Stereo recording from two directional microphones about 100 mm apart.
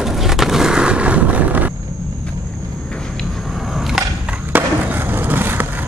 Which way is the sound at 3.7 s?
5° right (ahead or behind).